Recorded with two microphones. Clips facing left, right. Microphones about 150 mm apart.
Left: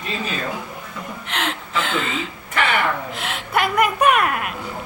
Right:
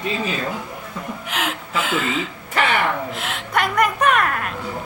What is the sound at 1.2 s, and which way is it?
A woman's voice, 5° right (ahead or behind).